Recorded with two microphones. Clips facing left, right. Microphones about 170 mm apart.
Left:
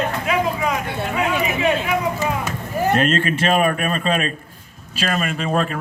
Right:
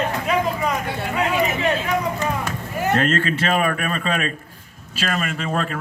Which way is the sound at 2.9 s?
20° left (ahead or behind).